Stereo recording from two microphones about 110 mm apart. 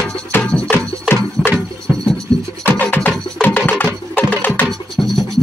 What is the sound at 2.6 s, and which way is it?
Music, 15° left (ahead or behind).